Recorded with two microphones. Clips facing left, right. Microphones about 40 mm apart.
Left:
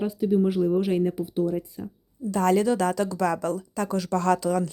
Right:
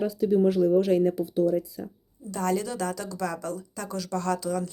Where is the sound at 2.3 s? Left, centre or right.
Left.